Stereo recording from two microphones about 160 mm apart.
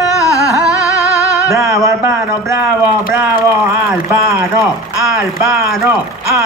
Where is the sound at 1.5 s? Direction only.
20° right (ahead or behind).